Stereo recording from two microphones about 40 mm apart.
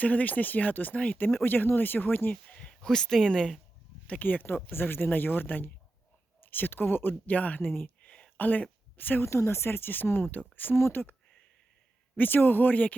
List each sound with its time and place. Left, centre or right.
0.0 s speech: left
0.9 s speech: left
1.5 s speech: left
2.3 s a sound: left
2.8 s speech: centre
4.2 s speech: left
7.3 s speech: left
7.6 s speech: left
8.0 s a sound: left
8.4 s speech: left
9.3 s speech: left
12.1 s speech: left